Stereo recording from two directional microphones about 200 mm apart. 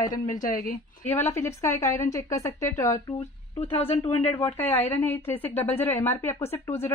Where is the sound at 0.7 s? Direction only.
10° left (ahead or behind).